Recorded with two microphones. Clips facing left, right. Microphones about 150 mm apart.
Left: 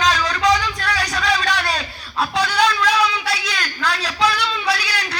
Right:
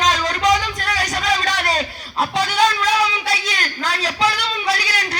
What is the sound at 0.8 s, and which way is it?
Music, 20° right (ahead or behind).